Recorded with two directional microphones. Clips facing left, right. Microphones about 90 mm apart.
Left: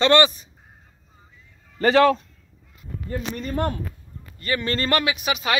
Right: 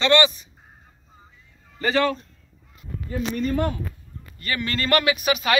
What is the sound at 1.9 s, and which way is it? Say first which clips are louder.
Speech: left 6 dB; 90° left.